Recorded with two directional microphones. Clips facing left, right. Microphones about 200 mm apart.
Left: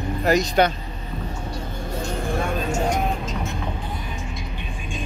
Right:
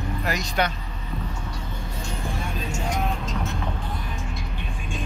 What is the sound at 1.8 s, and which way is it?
Vehicle, 55° left (ahead or behind).